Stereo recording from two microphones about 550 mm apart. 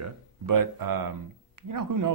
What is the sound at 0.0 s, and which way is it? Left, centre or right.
A man's voice, right.